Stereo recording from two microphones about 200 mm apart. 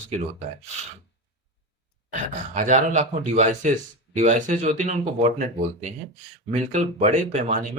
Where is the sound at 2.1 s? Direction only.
40° right (ahead or behind).